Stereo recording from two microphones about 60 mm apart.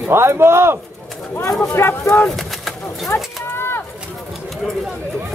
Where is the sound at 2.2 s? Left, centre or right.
Centre.